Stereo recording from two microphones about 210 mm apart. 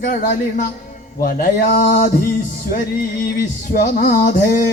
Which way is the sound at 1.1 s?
45° left (ahead or behind).